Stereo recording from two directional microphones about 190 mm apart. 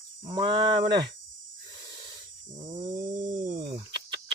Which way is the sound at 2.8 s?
45° right (ahead or behind).